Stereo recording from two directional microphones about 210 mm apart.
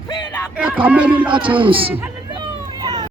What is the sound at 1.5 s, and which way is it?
Speech, 25° right (ahead or behind).